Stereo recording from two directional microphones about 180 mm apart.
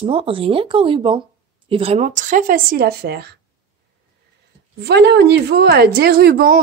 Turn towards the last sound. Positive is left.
turn(degrees=-55)  # may be behind; listen again after turning